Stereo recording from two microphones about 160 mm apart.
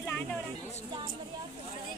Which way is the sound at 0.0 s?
15° left (ahead or behind).